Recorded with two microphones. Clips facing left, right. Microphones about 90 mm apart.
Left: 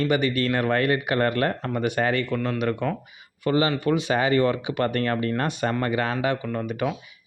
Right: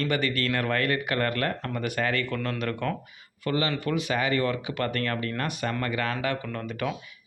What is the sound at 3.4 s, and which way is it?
Speech, 25° left (ahead or behind).